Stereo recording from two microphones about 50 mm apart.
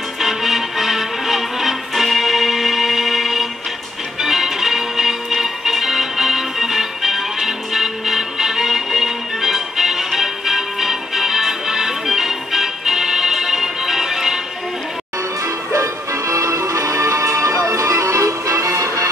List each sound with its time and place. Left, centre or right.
0.2 s music: centre
15.4 s music: right